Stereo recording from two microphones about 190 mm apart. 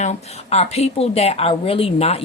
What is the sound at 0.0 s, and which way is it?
Speech, 35° left (ahead or behind).